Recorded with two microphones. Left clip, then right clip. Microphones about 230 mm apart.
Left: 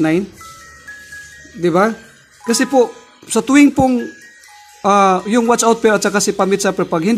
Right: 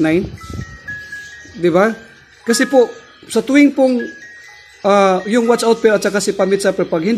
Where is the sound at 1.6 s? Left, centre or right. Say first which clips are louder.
Right 1 dB; centre.